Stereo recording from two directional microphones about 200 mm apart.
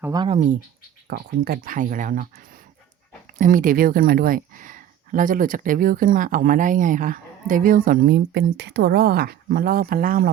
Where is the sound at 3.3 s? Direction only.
40° right (ahead or behind).